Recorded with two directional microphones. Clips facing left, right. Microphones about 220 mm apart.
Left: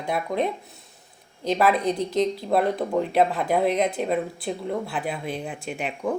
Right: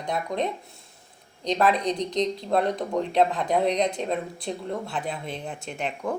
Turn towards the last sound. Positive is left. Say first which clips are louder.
# left 2 dB
turn(degrees=5)  # may be behind; listen again after turning